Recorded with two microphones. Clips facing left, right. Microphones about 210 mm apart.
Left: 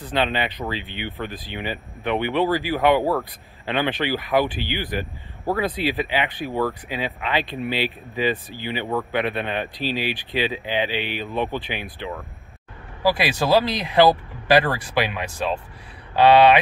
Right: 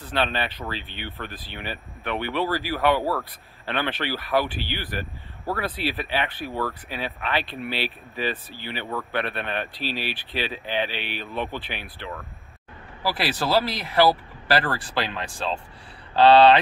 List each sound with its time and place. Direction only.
0.1 s speech: 15° left (ahead or behind)